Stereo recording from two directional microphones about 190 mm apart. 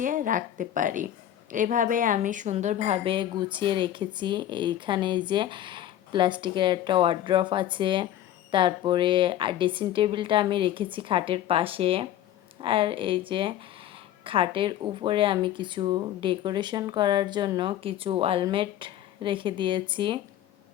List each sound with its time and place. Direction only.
0.0 s a woman's voice: 45° right (ahead or behind); by 20.1 s 25° right (ahead or behind)